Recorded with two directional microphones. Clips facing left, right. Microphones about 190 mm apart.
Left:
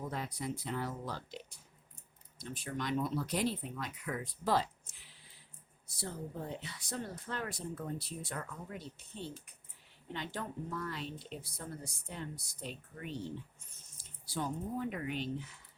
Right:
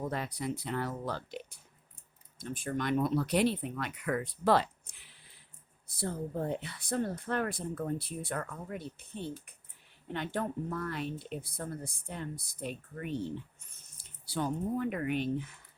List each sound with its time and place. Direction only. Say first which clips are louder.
0.1 s speech: right 4 dB; 70° right (ahead or behind)